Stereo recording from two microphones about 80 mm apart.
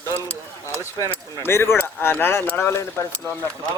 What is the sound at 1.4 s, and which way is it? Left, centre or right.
Speech, left.